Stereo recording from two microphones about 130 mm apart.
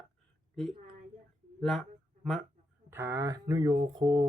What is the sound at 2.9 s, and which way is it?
Speech, 20° right (ahead or behind).